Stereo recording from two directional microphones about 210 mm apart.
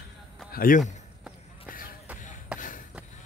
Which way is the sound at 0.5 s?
45° left (ahead or behind).